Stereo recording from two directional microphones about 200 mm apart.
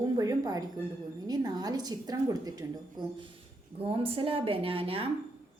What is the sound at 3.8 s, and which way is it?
A woman's voice, 30° right (ahead or behind).